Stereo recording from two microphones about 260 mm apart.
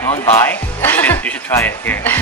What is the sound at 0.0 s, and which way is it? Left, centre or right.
Speech, centre.